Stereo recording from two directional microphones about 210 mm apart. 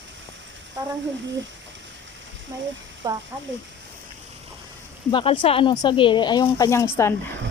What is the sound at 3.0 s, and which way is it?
Speech, 20° right (ahead or behind).